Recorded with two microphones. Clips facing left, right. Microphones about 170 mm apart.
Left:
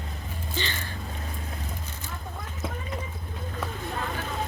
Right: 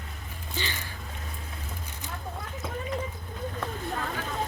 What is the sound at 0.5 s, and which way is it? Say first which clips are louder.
Speech: left 2 dB; 10° right (ahead or behind).